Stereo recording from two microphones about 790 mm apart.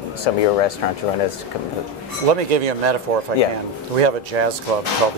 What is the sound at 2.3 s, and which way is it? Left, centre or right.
Speech, right.